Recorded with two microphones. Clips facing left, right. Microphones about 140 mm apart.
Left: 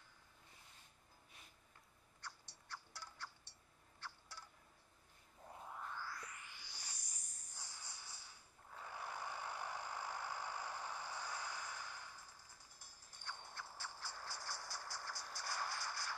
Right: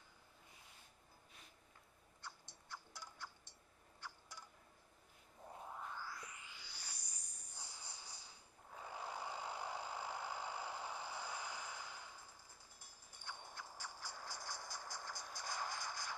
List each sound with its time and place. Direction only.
2.7 s a sound: 15° right (ahead or behind)
5.5 s music: 10° right (ahead or behind)
7.2 s cricket: 15° right (ahead or behind)
8.7 s vehicle: 15° right (ahead or behind)
13.2 s music: 15° right (ahead or behind)